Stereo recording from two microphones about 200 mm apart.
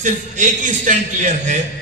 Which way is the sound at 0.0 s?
40° right (ahead or behind).